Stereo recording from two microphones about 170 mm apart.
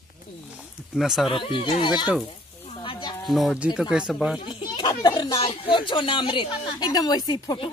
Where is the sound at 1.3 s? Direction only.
30° left (ahead or behind).